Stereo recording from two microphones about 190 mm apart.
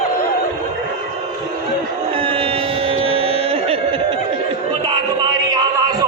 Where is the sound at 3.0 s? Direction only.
30° right (ahead or behind).